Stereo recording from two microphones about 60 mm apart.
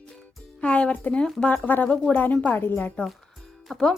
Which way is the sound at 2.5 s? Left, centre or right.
Left.